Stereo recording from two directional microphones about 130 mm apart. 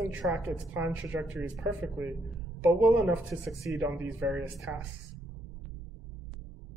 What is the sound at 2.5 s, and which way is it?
Speech, 15° right (ahead or behind).